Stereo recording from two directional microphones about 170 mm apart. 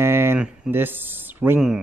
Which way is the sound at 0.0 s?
15° right (ahead or behind).